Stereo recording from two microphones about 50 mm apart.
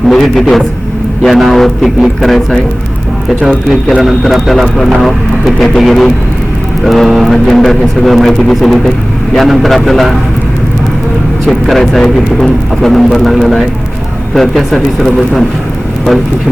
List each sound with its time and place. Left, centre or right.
0.1 s speech: centre
3.7 s speech: centre
11.4 s speech: centre